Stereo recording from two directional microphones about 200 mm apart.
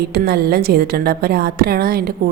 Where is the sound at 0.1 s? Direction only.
50° right (ahead or behind).